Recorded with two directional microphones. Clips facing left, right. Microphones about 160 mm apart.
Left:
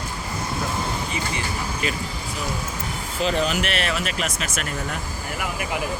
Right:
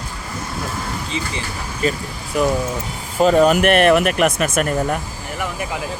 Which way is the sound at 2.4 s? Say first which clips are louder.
Right 14 dB; 65° right (ahead or behind).